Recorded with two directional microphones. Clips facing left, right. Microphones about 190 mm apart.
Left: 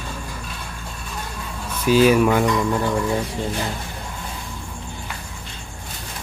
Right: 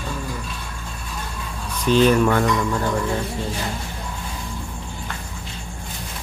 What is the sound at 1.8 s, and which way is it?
Speech, 5° left (ahead or behind).